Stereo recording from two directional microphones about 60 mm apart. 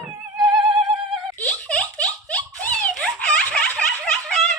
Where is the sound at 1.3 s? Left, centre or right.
Left.